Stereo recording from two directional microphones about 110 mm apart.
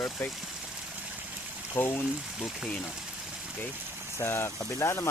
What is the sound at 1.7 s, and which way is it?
Speech, 20° left (ahead or behind).